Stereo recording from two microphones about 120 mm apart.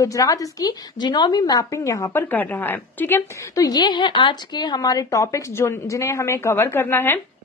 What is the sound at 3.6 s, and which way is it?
A woman's voice, 35° left (ahead or behind).